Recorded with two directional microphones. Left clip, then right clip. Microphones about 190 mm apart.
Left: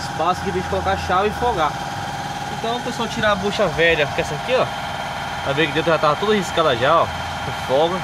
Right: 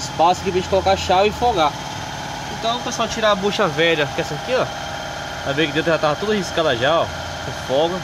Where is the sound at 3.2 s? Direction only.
30° right (ahead or behind); by 7.9 s centre (ahead or behind).